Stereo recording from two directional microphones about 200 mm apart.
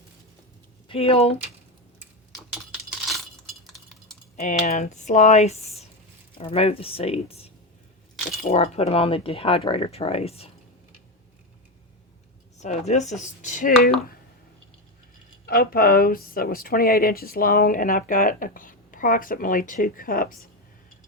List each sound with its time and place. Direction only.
0.9 s speech: 30° left (ahead or behind)
4.4 s speech: 35° left (ahead or behind)
12.5 s speech: 35° left (ahead or behind)
15.4 s speech: 45° left (ahead or behind)